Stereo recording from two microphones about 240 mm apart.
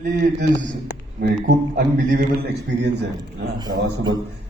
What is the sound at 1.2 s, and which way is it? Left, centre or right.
A man's voice, right.